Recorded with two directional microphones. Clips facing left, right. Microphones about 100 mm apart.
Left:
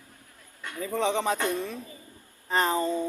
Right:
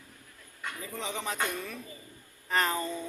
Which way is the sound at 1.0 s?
65° left (ahead or behind).